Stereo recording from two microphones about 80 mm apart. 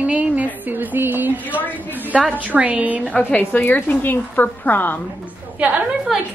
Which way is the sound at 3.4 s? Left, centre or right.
Left.